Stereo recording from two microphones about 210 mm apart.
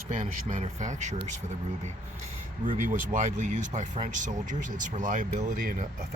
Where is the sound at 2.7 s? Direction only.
40° right (ahead or behind).